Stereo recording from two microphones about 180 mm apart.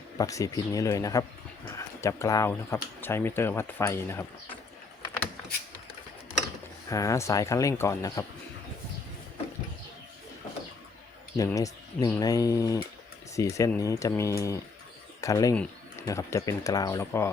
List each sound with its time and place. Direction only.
0.2 s speech: 20° left (ahead or behind)
6.9 s speech: 20° left (ahead or behind)
11.3 s speech: 20° left (ahead or behind)